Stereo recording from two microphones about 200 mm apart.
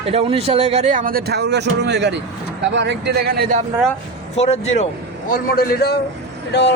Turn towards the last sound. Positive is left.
turn(degrees=55)  # may be behind; listen again after turning